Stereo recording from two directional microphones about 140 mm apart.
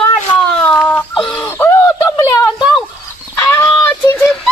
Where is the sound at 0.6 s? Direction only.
10° left (ahead or behind).